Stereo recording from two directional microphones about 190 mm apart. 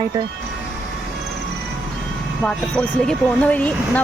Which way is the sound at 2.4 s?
5° left (ahead or behind).